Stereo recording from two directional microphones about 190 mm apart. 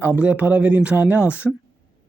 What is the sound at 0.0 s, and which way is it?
Speech, 10° right (ahead or behind).